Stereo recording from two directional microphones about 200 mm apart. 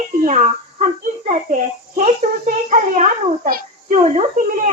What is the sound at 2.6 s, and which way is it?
A child's voice, 40° right (ahead or behind).